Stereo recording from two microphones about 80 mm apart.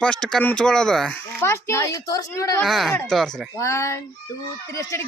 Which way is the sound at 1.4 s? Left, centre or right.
Left.